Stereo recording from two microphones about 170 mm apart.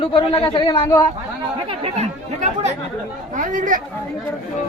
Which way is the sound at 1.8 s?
40° right (ahead or behind).